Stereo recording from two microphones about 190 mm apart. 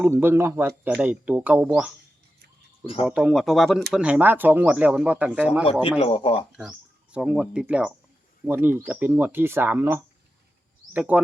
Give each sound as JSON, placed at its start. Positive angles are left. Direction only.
{"t": 0.0, "sound": "speech", "side_deg": -10}
{"t": 2.8, "sound": "speech", "side_deg": 30}
{"t": 3.1, "sound": "speech", "side_deg": -5}
{"t": 6.0, "sound": "speech", "side_deg": 25}
{"t": 6.5, "sound": "speech", "side_deg": -5}